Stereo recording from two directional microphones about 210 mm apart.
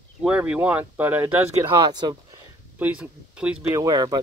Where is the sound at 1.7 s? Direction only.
20° right (ahead or behind).